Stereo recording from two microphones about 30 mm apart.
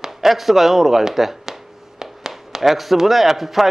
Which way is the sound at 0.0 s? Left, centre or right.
Centre.